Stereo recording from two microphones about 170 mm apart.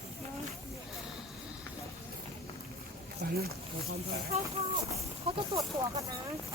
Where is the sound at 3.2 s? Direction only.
70° right (ahead or behind).